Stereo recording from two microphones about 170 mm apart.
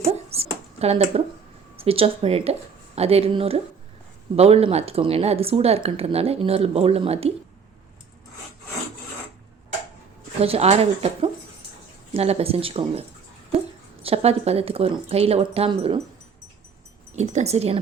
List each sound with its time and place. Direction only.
0.0 s a sound: 35° right (ahead or behind)
1.7 s a woman's voice: 35° right (ahead or behind)
10.4 s a woman's voice: 35° right (ahead or behind)
17.2 s a woman's voice: 40° right (ahead or behind)